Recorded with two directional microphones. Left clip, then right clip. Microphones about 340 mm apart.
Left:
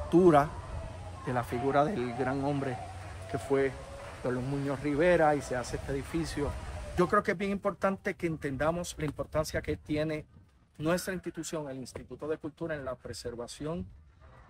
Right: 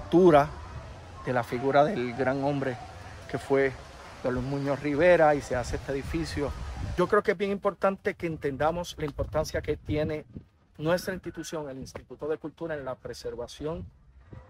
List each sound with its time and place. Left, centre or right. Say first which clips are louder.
0.1 s speech: right 3 dB; right
7.0 s speech: right 3 dB; centre